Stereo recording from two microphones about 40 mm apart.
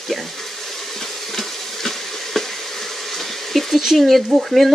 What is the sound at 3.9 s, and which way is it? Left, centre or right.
Speech, centre.